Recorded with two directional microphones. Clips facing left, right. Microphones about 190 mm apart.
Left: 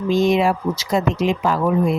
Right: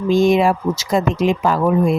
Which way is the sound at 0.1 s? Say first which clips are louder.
Right 3 dB; 50° right (ahead or behind).